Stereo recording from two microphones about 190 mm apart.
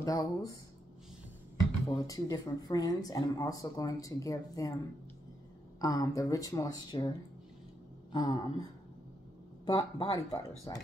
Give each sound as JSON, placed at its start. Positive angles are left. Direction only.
{"t": 0.0, "sound": "speech", "side_deg": 20}
{"t": 2.0, "sound": "speech", "side_deg": 20}
{"t": 5.8, "sound": "speech", "side_deg": 20}
{"t": 9.7, "sound": "speech", "side_deg": 20}